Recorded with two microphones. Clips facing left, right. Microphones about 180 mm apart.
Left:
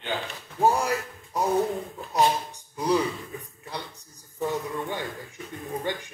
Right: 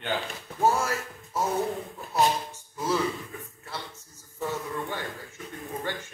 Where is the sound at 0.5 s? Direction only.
15° left (ahead or behind).